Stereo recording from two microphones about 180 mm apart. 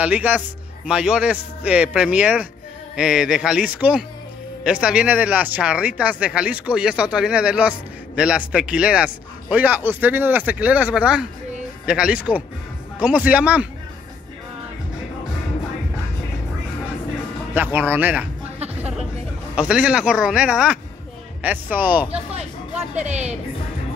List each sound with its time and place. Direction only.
0.0 s speech: 10° right (ahead or behind)
17.6 s speech: 10° right (ahead or behind)